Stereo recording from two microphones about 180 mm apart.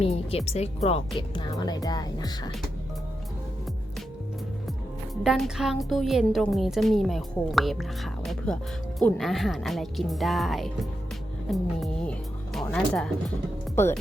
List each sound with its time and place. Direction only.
0.0 s speech: 35° left (ahead or behind)
5.2 s a woman's voice: centre (ahead or behind)